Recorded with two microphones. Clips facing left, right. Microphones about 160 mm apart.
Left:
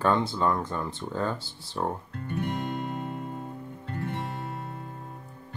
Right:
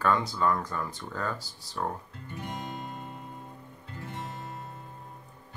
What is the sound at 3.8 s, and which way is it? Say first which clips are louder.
Music: left 6 dB; 60° left (ahead or behind).